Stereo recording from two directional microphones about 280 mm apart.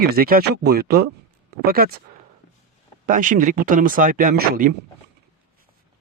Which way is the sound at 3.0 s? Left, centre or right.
Right.